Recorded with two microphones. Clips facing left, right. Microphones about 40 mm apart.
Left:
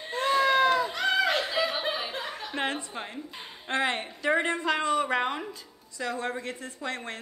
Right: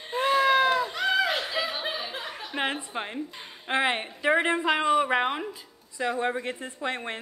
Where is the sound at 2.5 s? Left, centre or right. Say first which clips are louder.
Right 2 dB; centre.